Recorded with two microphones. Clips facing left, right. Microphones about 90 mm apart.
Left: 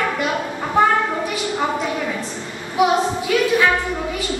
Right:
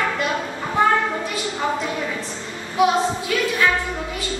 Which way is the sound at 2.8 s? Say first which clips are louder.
Left 1 dB; 20° left (ahead or behind).